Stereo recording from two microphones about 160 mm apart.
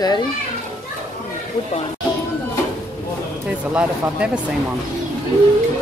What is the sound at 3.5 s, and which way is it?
Speech, 5° right (ahead or behind).